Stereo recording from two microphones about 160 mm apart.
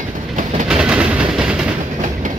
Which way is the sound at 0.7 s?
5° right (ahead or behind).